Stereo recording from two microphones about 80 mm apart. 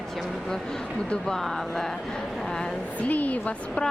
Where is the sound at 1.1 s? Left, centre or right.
Centre.